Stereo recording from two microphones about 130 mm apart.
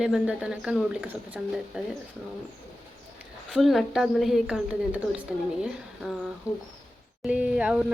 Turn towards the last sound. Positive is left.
turn(degrees=-10)  # may be behind; listen again after turning